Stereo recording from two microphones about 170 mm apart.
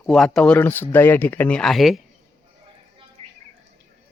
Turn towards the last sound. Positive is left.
turn(degrees=-35)  # may be behind; listen again after turning